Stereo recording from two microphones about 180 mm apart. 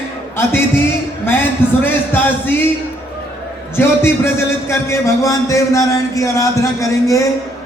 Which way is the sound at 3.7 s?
15° left (ahead or behind).